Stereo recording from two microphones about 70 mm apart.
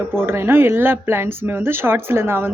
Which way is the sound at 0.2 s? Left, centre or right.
Right.